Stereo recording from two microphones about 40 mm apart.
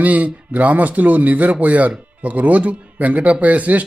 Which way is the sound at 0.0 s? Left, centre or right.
Right.